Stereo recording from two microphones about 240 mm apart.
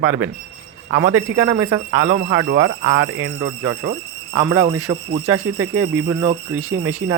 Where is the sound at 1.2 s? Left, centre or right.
Right.